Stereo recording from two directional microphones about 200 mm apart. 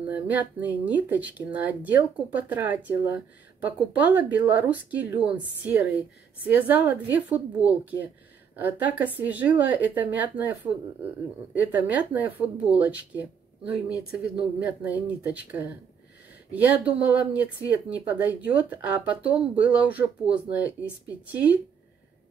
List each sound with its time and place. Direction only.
0.1 s speech: 10° right (ahead or behind)